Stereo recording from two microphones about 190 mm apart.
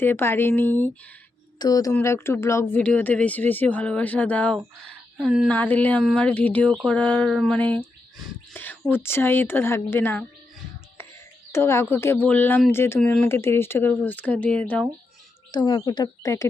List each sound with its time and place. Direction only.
0.0 s speech: 10° left (ahead or behind)
1.5 s speech: 20° left (ahead or behind)
5.1 s speech: 5° right (ahead or behind)
5.5 s speech: 10° left (ahead or behind)
11.5 s speech: 15° left (ahead or behind)
15.5 s speech: 20° left (ahead or behind)